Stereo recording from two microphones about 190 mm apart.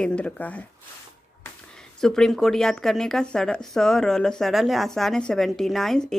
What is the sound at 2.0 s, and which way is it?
Speech, 5° left (ahead or behind).